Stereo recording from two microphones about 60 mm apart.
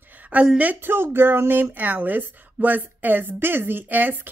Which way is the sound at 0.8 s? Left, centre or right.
Right.